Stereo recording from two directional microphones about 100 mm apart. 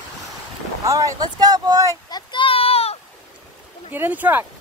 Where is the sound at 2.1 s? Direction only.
45° left (ahead or behind).